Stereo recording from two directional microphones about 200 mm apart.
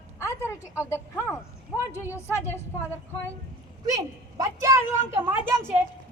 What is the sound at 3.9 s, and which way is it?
A woman's voice, 15° right (ahead or behind).